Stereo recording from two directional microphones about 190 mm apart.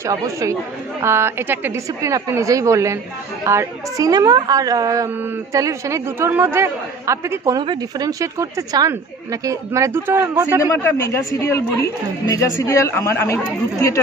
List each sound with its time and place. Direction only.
0.0 s a woman's voice: 15° right (ahead or behind)
10.6 s a woman's voice: 15° left (ahead or behind)